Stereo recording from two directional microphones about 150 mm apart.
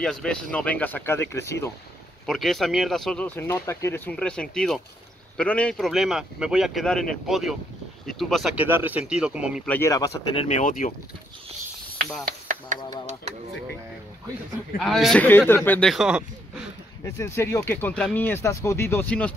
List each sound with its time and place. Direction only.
0.0 s speech: 5° left (ahead or behind)
2.2 s speech: centre (ahead or behind)
8.5 s speech: 15° right (ahead or behind)
9.7 s speech: 20° left (ahead or behind)
10.3 s speech: 35° left (ahead or behind)
10.6 s speech: 70° left (ahead or behind)
12.3 s a sound: 60° right (ahead or behind)
14.8 s speech: centre (ahead or behind)
15.2 s speech: 15° left (ahead or behind)
15.9 s speech: 5° right (ahead or behind)
17.0 s speech: 20° left (ahead or behind)